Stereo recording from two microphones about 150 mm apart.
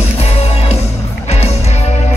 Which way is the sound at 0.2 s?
45° left (ahead or behind).